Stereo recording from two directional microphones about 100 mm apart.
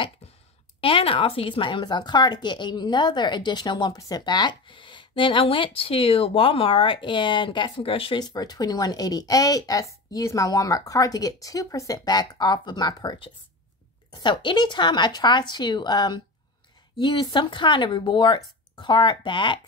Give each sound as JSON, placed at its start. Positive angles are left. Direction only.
{"t": 0.7, "sound": "speech", "side_deg": 65}
{"t": 8.2, "sound": "speech", "side_deg": 40}